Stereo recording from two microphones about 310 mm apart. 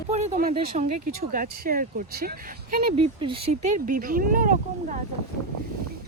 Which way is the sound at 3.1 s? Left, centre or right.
Centre.